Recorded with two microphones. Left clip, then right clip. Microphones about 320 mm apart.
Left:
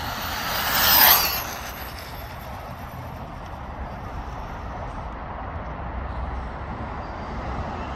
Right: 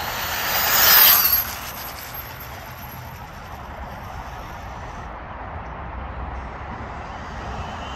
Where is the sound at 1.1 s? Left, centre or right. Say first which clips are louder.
Left 1 dB; left.